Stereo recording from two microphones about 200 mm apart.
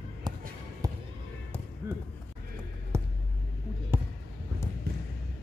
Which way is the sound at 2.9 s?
15° right (ahead or behind).